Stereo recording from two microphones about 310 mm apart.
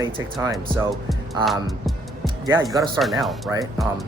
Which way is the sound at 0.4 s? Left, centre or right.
Centre.